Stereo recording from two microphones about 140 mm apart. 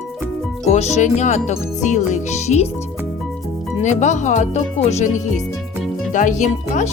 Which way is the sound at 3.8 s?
55° left (ahead or behind).